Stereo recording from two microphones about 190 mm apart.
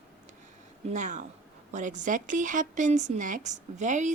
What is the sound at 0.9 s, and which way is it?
Speech, 40° right (ahead or behind).